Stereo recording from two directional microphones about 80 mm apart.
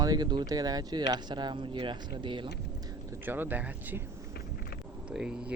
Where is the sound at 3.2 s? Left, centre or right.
Right.